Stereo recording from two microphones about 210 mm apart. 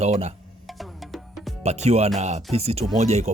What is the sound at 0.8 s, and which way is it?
Music, centre (ahead or behind).